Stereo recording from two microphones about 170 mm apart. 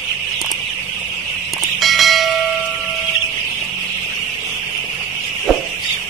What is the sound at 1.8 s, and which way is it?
Bell, centre (ahead or behind).